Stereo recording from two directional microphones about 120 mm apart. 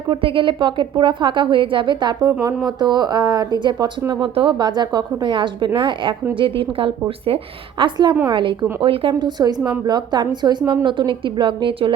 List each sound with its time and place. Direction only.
0.1 s a woman's voice: 45° right (ahead or behind)